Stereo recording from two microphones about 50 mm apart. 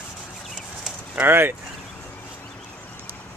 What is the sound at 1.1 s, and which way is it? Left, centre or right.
Speech, right.